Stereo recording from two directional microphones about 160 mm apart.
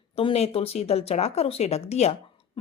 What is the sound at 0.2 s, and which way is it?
Speech, 40° left (ahead or behind).